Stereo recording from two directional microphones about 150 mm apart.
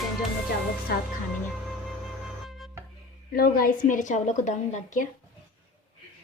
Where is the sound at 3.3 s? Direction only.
75° left (ahead or behind); by 5.0 s 55° left (ahead or behind).